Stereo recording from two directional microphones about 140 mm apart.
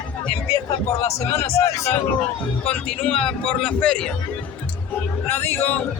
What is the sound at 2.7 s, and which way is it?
A man's voice, 10° left (ahead or behind).